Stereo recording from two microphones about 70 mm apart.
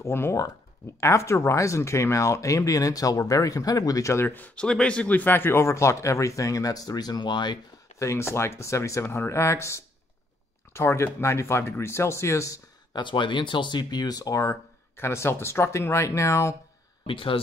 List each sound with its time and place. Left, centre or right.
0.0 s speech: left
4.3 s speech: left
4.6 s speech: centre; by 7.5 s left
8.0 s speech: left
12.9 s speech: left